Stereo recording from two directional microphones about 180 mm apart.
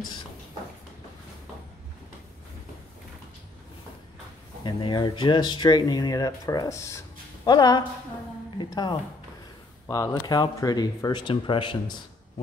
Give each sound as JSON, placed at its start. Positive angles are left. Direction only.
{"t": 4.6, "sound": "speech", "side_deg": 25}